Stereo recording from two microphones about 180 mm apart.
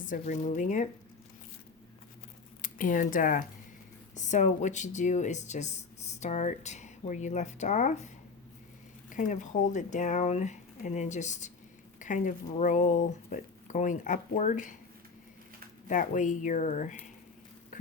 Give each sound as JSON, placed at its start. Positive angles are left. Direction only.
{"t": 0.0, "sound": "speech", "side_deg": 45}
{"t": 2.6, "sound": "speech", "side_deg": 50}
{"t": 15.9, "sound": "speech", "side_deg": 45}